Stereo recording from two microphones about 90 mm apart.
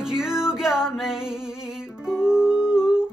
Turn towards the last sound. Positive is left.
turn(degrees=-5)  # may be behind; listen again after turning